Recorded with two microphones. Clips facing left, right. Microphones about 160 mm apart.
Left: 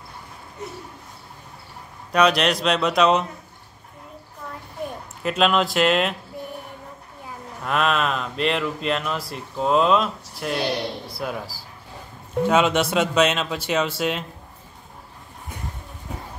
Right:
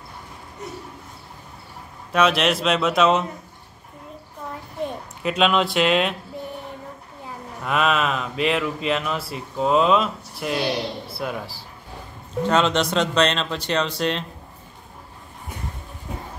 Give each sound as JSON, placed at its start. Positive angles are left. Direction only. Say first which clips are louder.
{"t": 2.1, "sound": "speech", "louder": "left 1 dB", "side_deg": 0}
{"t": 5.2, "sound": "speech", "louder": "even", "side_deg": 0}
{"t": 7.6, "sound": "speech", "louder": "right 1 dB", "side_deg": 0}